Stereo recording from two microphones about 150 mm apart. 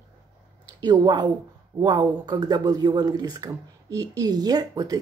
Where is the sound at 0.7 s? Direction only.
30° right (ahead or behind).